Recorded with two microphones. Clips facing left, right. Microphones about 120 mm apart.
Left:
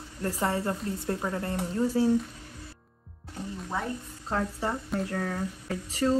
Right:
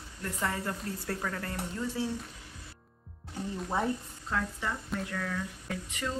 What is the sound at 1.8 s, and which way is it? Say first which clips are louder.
Speech: left 9 dB; 40° left (ahead or behind).